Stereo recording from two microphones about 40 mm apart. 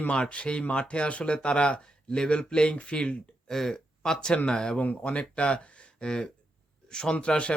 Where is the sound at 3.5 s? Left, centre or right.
Centre.